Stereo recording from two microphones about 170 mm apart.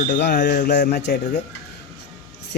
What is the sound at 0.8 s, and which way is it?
Speech, 65° left (ahead or behind).